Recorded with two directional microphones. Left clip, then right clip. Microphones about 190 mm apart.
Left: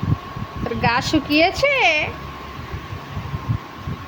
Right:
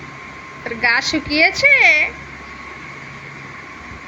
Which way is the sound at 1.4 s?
15° left (ahead or behind).